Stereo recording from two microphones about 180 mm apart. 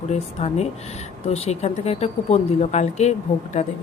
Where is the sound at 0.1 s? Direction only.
35° left (ahead or behind).